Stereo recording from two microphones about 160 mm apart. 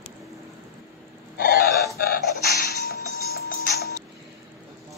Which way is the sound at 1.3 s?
65° left (ahead or behind).